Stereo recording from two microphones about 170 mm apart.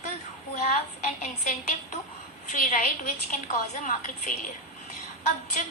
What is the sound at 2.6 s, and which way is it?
A woman's voice, 55° left (ahead or behind).